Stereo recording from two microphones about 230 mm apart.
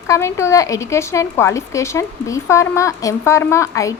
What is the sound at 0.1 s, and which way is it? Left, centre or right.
Speech, centre.